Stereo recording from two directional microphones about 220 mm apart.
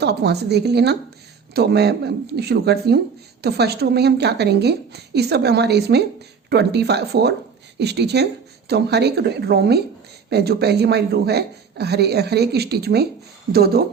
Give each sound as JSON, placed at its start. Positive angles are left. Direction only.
{"t": 0.0, "sound": "speech", "side_deg": -50}